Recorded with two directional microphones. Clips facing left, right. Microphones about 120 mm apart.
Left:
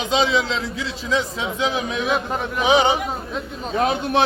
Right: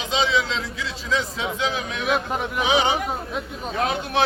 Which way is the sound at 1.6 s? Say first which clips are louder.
Left 4 dB; 20° left (ahead or behind).